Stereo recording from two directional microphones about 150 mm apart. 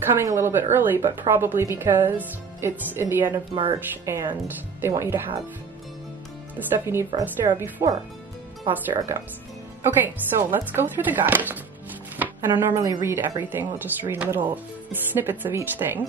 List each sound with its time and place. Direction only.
0.2 s speech: 20° right (ahead or behind)
6.7 s speech: 15° right (ahead or behind)